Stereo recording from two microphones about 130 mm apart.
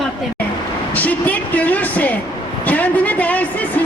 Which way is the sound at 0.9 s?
10° left (ahead or behind).